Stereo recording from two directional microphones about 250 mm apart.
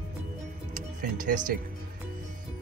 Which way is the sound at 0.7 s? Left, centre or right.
Right.